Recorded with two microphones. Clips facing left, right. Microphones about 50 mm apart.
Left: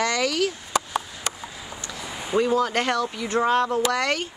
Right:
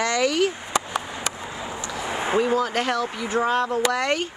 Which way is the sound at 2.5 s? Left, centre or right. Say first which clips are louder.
Even; centre.